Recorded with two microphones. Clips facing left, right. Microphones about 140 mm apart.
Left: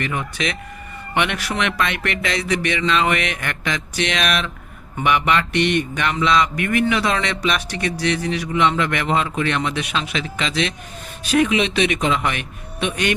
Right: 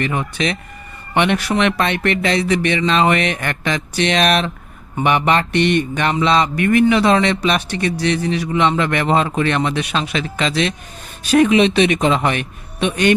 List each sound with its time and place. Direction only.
0.0 s mantra: 30° right (ahead or behind)